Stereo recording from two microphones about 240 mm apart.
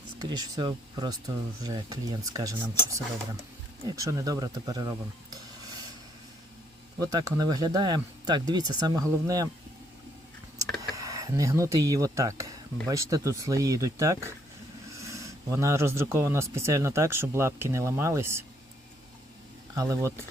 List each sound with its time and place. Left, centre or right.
0.2 s speech: centre
3.8 s speech: centre
7.0 s speech: centre
10.9 s speech: centre
19.7 s speech: centre